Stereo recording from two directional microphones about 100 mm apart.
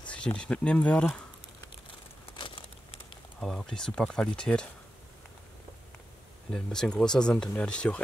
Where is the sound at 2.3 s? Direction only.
55° left (ahead or behind).